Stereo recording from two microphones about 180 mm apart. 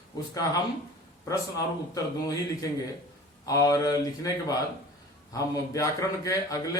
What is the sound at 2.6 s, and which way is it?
A man's voice, 20° left (ahead or behind).